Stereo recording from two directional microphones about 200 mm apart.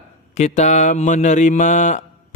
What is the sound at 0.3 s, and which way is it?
Mantra, 35° left (ahead or behind).